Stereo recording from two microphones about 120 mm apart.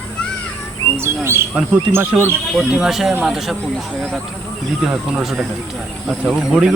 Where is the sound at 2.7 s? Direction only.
5° right (ahead or behind).